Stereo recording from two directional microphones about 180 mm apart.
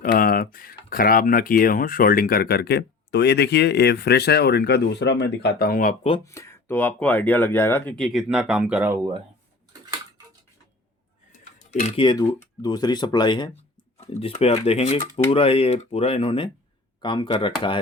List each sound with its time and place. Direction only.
0.0 s speech: 50° left (ahead or behind)
6.2 s speech: 15° left (ahead or behind); by 9.0 s 10° right (ahead or behind)
11.6 s speech: 40° left (ahead or behind)
12.0 s speech: 20° left (ahead or behind)
14.0 s speech: 35° left (ahead or behind)